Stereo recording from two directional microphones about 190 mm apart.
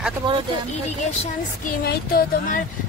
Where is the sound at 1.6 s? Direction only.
50° left (ahead or behind).